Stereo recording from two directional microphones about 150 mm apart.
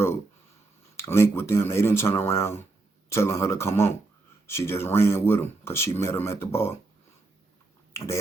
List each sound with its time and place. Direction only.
0.9 s speech: 15° left (ahead or behind)